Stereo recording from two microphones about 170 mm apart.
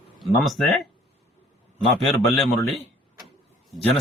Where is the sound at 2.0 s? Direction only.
Centre (ahead or behind).